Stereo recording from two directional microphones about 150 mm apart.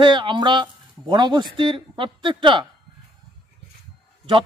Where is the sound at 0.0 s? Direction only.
35° right (ahead or behind).